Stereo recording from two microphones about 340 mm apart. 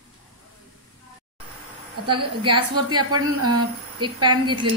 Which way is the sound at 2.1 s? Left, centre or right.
Centre.